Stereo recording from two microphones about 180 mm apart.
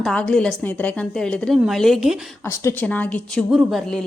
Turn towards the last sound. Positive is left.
turn(degrees=0)  # may be behind; listen again after turning